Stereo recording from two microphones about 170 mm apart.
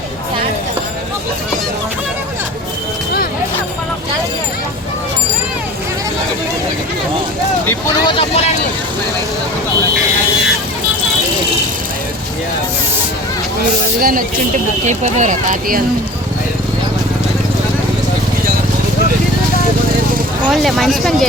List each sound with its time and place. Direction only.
8.0 s speech: 30° left (ahead or behind)
14.0 s speech: 55° right (ahead or behind)
14.8 s speech: 45° right (ahead or behind)
20.5 s speech: centre (ahead or behind)